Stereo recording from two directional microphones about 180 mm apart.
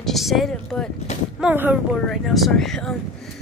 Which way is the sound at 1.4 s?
10° right (ahead or behind).